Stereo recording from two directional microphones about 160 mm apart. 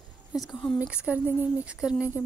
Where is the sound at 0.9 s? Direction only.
10° right (ahead or behind).